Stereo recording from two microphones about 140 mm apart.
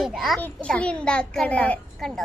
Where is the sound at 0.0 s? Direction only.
Centre (ahead or behind).